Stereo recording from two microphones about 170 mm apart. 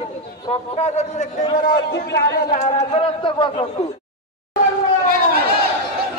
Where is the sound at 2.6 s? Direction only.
40° left (ahead or behind).